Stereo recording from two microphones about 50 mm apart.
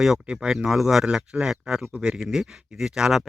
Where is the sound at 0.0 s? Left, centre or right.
Centre.